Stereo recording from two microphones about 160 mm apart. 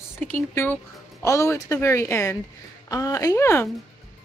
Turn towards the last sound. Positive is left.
turn(degrees=15)  # may be behind; listen again after turning